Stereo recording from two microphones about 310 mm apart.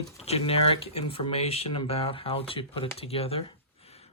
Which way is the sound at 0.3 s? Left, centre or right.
Centre.